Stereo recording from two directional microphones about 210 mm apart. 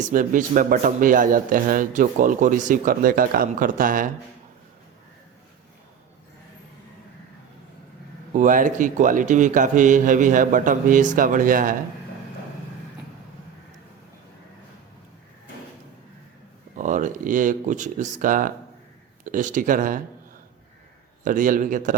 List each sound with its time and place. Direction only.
0.1 s speech: 40° right (ahead or behind)
8.3 s speech: 40° right (ahead or behind)
16.7 s speech: 35° right (ahead or behind)
21.2 s speech: 40° right (ahead or behind)